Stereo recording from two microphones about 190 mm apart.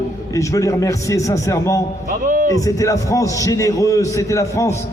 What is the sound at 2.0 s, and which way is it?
Speech, 45° right (ahead or behind).